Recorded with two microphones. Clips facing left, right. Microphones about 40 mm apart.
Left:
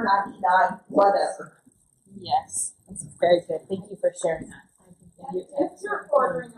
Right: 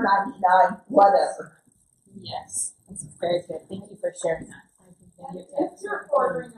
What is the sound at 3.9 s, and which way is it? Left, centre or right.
Speech, centre.